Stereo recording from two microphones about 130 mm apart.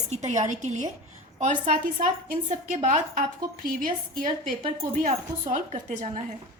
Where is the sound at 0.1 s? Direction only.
60° right (ahead or behind); by 2.0 s 90° right.